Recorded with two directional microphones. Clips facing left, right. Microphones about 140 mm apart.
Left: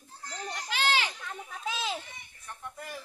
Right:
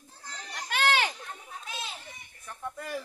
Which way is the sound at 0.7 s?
55° right (ahead or behind).